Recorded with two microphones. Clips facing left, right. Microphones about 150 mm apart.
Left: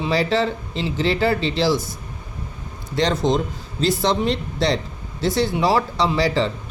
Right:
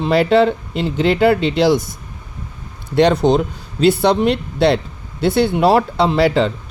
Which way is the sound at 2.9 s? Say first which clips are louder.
Right 7 dB; 65° right (ahead or behind).